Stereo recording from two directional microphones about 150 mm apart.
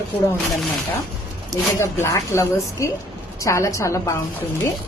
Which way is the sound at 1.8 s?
20° left (ahead or behind).